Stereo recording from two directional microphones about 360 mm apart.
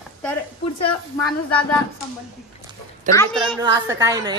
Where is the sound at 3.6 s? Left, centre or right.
Centre.